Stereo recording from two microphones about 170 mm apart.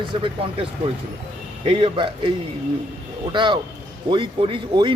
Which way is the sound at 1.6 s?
30° right (ahead or behind).